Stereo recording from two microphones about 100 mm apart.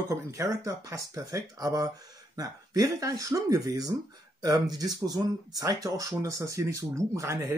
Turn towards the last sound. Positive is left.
turn(degrees=-30)  # may be behind; listen again after turning